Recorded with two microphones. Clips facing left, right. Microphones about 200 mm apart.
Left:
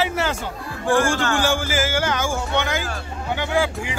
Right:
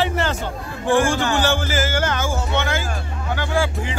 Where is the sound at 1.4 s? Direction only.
10° left (ahead or behind).